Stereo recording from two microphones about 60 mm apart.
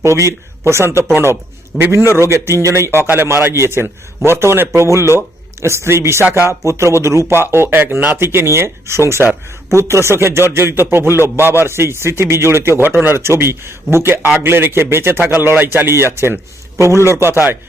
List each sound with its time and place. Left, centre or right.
0.0 s a man's voice: right
6.7 s a man's voice: right
7.3 s a man's voice: right